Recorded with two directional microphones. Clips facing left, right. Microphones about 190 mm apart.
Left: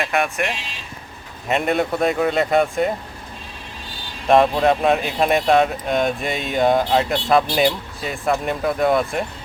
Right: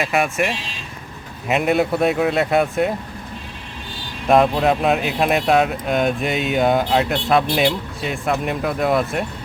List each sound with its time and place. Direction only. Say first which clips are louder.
0.0 s speech: right 2 dB; centre (ahead or behind)
4.3 s speech: even; centre (ahead or behind)